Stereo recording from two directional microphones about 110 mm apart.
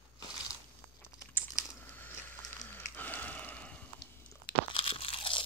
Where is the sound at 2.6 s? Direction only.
15° left (ahead or behind).